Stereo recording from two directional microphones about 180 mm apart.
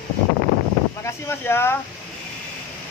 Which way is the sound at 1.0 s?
15° left (ahead or behind).